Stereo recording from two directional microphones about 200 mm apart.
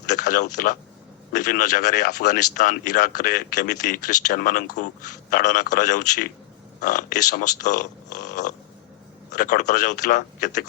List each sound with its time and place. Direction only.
0.1 s speech: 40° left (ahead or behind)